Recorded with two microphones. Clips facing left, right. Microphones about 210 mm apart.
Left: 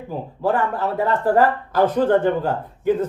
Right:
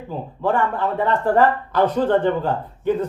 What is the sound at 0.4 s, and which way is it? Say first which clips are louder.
Speech: even; 40° left (ahead or behind).